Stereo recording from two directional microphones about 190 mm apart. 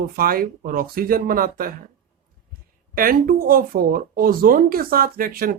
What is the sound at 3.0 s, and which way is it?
A woman's voice, 50° right (ahead or behind).